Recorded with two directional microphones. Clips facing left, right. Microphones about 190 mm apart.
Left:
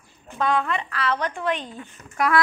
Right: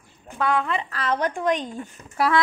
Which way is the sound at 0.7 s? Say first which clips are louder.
Even; 35° right (ahead or behind).